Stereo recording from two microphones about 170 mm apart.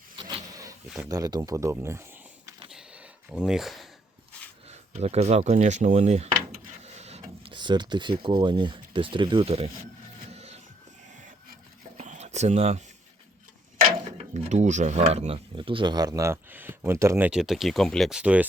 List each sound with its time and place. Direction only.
0.2 s printer: 25° right (ahead or behind)
0.9 s speech: 20° right (ahead or behind)
2.6 s a sound: 5° right (ahead or behind)
4.7 s speech: 40° right (ahead or behind)
6.8 s a sound: 40° right (ahead or behind)
8.2 s speech: 25° right (ahead or behind)
10.3 s music: 40° right (ahead or behind)
11.9 s a sound: 45° right (ahead or behind)
14.0 s speech: 40° right (ahead or behind); by 18.4 s 5° right (ahead or behind)